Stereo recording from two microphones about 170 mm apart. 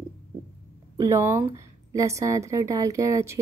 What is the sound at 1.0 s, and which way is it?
Speech, 15° right (ahead or behind).